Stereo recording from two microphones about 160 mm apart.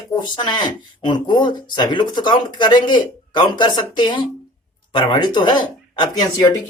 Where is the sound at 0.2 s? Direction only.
25° left (ahead or behind).